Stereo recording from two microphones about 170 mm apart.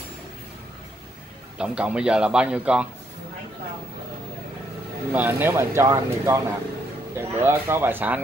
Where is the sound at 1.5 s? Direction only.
5° right (ahead or behind).